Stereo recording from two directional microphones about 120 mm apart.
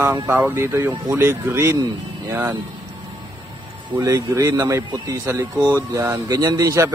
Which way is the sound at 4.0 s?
25° right (ahead or behind).